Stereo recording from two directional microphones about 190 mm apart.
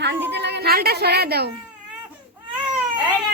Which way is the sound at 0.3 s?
65° right (ahead or behind).